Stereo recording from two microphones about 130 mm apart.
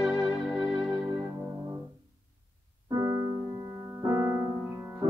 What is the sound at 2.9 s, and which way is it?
Music, 30° right (ahead or behind).